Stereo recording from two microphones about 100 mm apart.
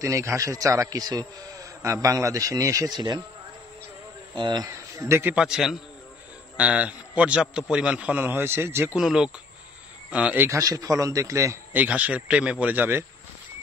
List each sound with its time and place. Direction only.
0.0 s a man's voice: 30° right (ahead or behind)
4.4 s speech: 45° right (ahead or behind)
4.9 s a man's voice: 30° right (ahead or behind)
5.3 s a man's voice: 5° right (ahead or behind); by 8.9 s 25° right (ahead or behind)
8.9 s a man's voice: 5° right (ahead or behind)
10.4 s a man's voice: 35° right (ahead or behind)
11.7 s a man's voice: 15° right (ahead or behind)